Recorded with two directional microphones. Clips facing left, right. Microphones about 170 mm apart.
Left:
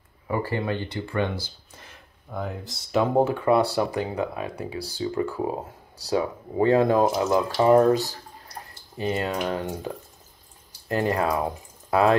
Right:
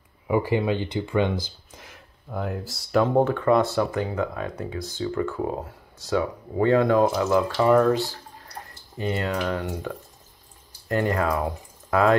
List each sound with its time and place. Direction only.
0.3 s speech: 15° right (ahead or behind); by 5.8 s 20° left (ahead or behind)
6.0 s speech: 35° left (ahead or behind)
6.7 s speech: 20° left (ahead or behind)
7.4 s speech: 35° left (ahead or behind)
8.9 s speech: 20° left (ahead or behind)